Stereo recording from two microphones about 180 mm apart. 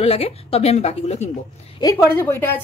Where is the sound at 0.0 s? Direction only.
35° left (ahead or behind).